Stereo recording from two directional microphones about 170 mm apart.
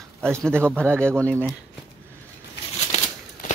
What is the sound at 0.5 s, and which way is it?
Speech, 15° right (ahead or behind).